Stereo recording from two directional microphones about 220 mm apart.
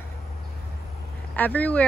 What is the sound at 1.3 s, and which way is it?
Speech, 5° left (ahead or behind).